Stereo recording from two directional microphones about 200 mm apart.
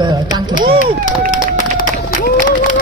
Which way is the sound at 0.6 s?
45° right (ahead or behind).